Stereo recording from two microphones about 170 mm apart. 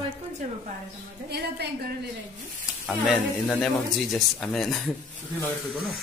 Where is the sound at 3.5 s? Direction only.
5° left (ahead or behind).